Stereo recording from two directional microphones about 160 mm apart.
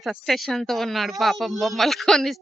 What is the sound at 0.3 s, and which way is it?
Speech, centre (ahead or behind).